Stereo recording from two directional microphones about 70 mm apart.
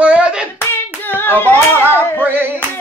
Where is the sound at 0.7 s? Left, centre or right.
Left.